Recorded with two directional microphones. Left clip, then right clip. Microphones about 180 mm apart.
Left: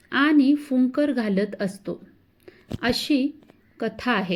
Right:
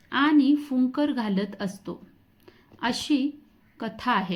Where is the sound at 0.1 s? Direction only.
20° left (ahead or behind).